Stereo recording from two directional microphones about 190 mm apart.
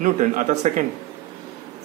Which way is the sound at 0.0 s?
40° right (ahead or behind).